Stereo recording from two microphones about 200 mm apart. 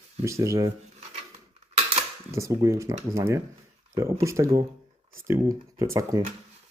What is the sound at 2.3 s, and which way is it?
Speech, 15° right (ahead or behind).